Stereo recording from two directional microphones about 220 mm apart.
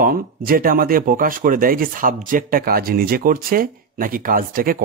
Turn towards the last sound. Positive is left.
turn(degrees=-40)  # may be behind; listen again after turning